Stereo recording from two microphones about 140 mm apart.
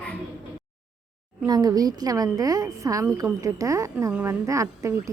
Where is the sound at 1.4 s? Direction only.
30° right (ahead or behind).